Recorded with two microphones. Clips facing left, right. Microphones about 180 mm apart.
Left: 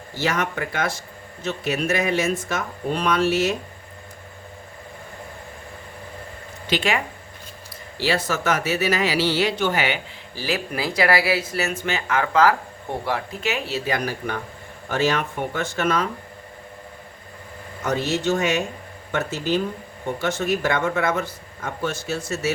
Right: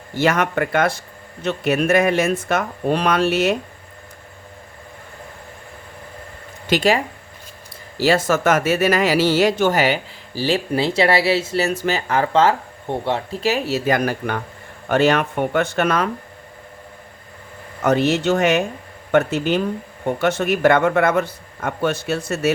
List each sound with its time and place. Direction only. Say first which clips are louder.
0.1 s a man's voice: right 6 dB; 55° right (ahead or behind)
6.7 s a man's voice: right 6 dB; 40° right (ahead or behind); by 16.0 s 60° right (ahead or behind)
17.8 s a man's voice: right 6 dB; 65° right (ahead or behind)